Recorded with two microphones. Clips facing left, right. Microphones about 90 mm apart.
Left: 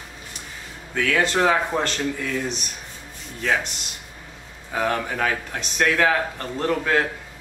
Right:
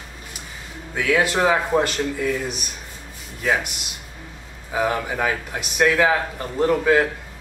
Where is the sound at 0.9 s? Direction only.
10° right (ahead or behind).